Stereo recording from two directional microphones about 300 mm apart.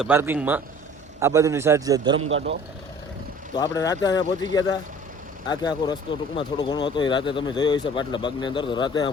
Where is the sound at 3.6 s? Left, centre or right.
Centre.